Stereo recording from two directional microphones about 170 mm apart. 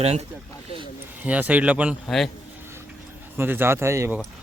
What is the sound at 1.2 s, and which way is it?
Speech, 10° right (ahead or behind).